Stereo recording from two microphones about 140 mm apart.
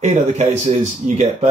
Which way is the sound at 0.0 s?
55° right (ahead or behind).